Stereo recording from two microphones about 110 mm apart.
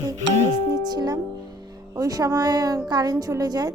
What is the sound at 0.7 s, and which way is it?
Music, 40° right (ahead or behind).